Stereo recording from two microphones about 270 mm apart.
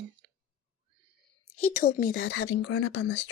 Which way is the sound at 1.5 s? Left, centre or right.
Left.